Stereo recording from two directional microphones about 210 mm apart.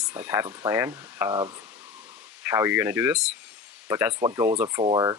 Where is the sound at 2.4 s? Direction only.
10° right (ahead or behind).